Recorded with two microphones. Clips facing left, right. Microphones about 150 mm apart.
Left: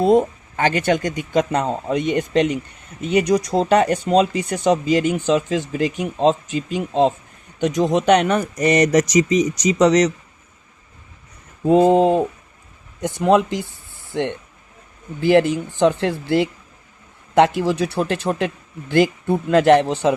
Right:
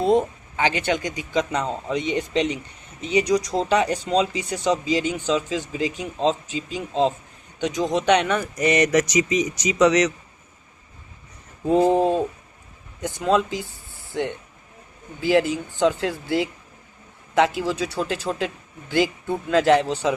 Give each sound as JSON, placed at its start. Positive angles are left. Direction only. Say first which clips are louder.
{"t": 0.0, "sound": "speech", "louder": "left 4 dB", "side_deg": 50}
{"t": 11.7, "sound": "a sound", "louder": "left 4 dB", "side_deg": 70}
{"t": 13.0, "sound": "speech", "louder": "left 5 dB", "side_deg": 65}
{"t": 15.2, "sound": "speech", "louder": "left 5 dB", "side_deg": 55}